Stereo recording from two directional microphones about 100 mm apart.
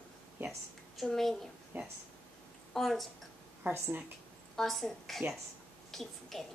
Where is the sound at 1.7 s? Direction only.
20° right (ahead or behind).